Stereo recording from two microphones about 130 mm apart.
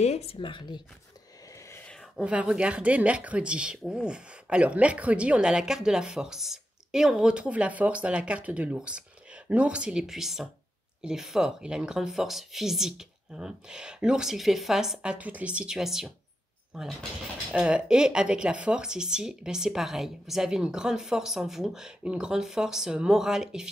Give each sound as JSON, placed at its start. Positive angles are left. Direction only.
{"t": 0.0, "sound": "speech", "side_deg": 55}
{"t": 1.7, "sound": "a sound", "side_deg": 15}
{"t": 2.0, "sound": "a woman's voice", "side_deg": -5}